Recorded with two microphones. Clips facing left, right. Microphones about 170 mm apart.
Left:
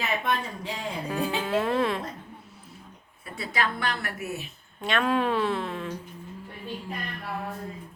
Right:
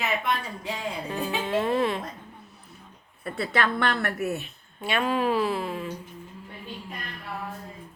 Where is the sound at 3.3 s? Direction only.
60° right (ahead or behind).